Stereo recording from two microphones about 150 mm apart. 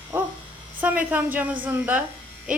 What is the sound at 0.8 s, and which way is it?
A woman's voice, 10° right (ahead or behind).